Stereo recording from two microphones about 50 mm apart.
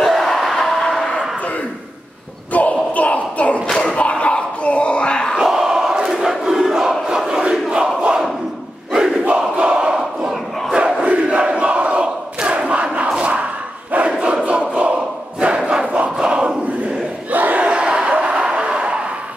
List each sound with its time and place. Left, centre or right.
0.0 s crowd: centre
2.5 s a sound: left
3.6 s a sound: centre
3.9 s a sound: left
5.4 s crowd: centre
8.0 s battle cry: centre
9.6 s crowd: centre
13.1 s battle cry: right
14.2 s crowd: right
17.3 s crowd: right
17.6 s battle cry: right
18.1 s a sound: right